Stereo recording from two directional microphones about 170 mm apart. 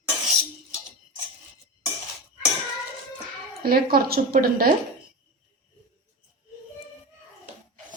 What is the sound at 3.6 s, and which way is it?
A woman's voice, 60° right (ahead or behind).